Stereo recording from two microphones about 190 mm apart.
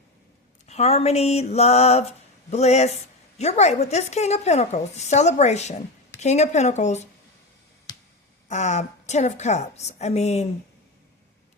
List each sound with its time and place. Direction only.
0.7 s a woman's voice: 35° left (ahead or behind)
7.9 s a sound: 20° left (ahead or behind)
8.4 s a woman's voice: 40° left (ahead or behind)